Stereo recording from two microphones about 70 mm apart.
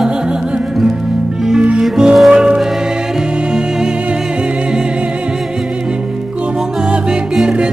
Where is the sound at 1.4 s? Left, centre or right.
Centre.